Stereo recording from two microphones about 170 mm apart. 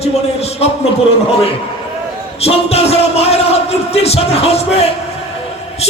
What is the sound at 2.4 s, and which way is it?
A man's voice, 35° left (ahead or behind).